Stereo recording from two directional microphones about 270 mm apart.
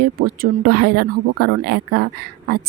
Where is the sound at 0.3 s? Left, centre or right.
Right.